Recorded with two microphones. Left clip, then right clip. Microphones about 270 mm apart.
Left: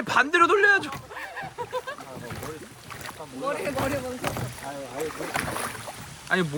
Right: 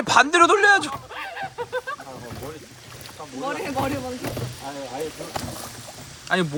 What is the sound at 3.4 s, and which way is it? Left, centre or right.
Speech, centre.